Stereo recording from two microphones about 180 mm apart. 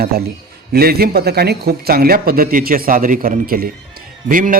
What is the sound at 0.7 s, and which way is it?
A man's voice, 60° right (ahead or behind).